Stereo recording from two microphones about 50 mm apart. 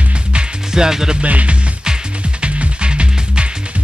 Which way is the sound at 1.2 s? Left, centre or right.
Right.